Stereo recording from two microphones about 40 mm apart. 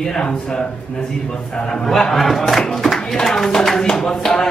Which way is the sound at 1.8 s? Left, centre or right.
Centre.